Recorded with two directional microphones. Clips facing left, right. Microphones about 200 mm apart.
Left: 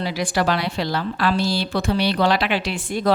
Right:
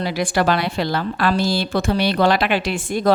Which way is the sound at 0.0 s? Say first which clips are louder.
Right 2 dB; 55° right (ahead or behind).